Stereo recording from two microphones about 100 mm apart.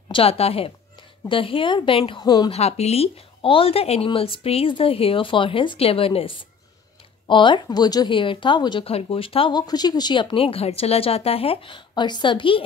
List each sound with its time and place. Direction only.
0.1 s speech: 80° left
1.3 s a woman's voice: 60° left (ahead or behind)
2.2 s a woman's voice: 40° left (ahead or behind)
2.5 s speech: 90° left; by 6.3 s 70° left (ahead or behind)
7.2 s speech: 55° left (ahead or behind)
8.8 s speech: 70° left (ahead or behind)
9.5 s speech: 45° left (ahead or behind)
10.3 s speech: 70° left (ahead or behind)